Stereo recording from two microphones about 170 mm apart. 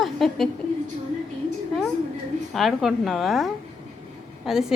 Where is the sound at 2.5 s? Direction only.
Centre (ahead or behind).